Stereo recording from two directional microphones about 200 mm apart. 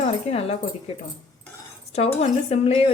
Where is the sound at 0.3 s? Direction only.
30° left (ahead or behind).